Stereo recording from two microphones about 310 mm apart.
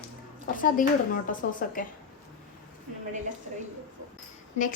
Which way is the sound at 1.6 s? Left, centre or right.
Left.